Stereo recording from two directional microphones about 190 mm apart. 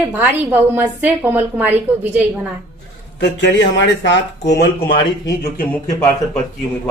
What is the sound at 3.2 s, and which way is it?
Speech, 65° left (ahead or behind).